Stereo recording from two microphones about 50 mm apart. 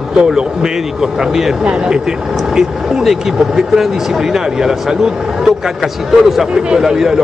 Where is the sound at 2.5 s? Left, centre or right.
Centre.